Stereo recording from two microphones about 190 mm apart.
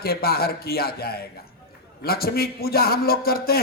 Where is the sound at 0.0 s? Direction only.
55° left (ahead or behind).